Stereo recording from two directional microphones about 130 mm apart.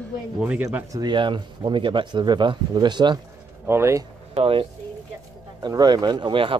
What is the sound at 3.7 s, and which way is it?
Speech, 20° right (ahead or behind).